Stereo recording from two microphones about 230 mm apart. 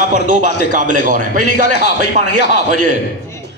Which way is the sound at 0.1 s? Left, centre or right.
Right.